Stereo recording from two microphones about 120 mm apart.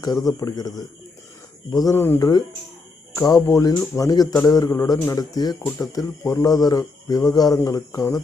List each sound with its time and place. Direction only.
0.0 s speech: 30° left (ahead or behind)